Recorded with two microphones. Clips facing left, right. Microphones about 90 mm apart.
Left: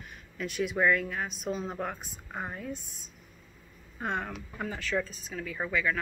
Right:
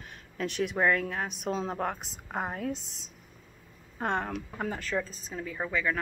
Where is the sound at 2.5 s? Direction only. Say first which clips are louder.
Right 4 dB; 70° right (ahead or behind).